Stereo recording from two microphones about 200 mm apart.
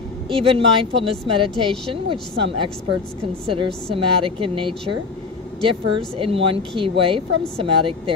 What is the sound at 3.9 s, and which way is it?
Speech, 25° right (ahead or behind).